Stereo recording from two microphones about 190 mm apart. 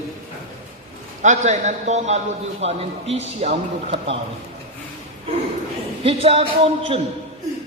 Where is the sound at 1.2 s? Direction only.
40° right (ahead or behind).